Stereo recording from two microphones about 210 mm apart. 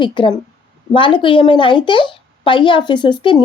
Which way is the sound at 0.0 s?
20° left (ahead or behind).